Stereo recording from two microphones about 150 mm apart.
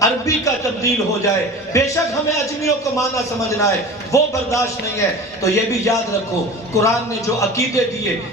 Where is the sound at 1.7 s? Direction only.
20° left (ahead or behind).